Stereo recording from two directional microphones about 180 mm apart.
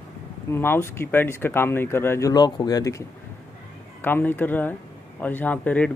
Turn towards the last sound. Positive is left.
turn(degrees=10)  # may be behind; listen again after turning